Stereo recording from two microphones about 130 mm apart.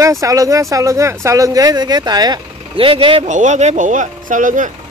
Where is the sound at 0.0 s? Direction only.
25° right (ahead or behind); by 3.3 s 45° right (ahead or behind).